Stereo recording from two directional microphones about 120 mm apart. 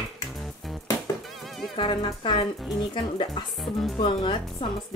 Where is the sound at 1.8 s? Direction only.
45° left (ahead or behind).